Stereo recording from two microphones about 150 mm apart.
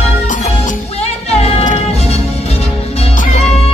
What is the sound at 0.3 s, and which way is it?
Music, 50° left (ahead or behind).